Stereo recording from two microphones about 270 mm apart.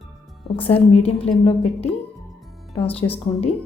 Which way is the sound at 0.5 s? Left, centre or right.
Left.